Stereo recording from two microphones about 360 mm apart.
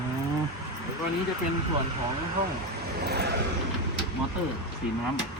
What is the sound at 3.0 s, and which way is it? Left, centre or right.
Vehicle, right.